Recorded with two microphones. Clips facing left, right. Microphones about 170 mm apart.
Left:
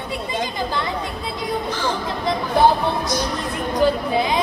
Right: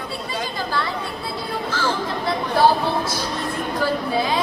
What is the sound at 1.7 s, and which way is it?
Speech, 20° left (ahead or behind).